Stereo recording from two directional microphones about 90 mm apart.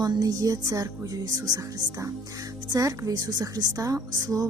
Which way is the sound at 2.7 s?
40° right (ahead or behind).